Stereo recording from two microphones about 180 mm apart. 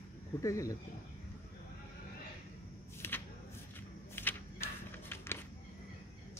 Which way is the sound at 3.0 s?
15° left (ahead or behind).